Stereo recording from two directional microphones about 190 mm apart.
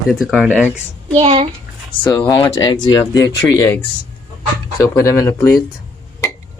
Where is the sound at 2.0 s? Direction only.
15° left (ahead or behind).